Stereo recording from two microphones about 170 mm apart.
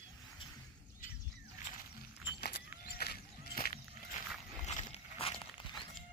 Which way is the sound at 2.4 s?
70° left (ahead or behind).